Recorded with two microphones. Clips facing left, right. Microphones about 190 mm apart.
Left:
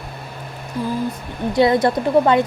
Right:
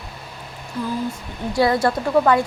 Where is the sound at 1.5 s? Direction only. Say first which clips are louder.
Left 3 dB; 20° left (ahead or behind).